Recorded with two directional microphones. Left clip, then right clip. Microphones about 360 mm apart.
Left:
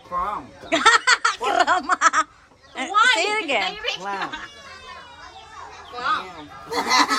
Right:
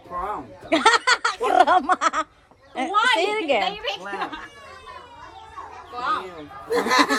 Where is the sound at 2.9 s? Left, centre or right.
Centre.